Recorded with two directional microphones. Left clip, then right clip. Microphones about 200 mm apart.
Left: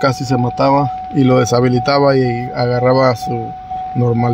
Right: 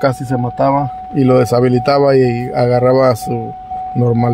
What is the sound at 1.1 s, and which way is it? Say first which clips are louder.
Speech: right 1 dB; centre (ahead or behind).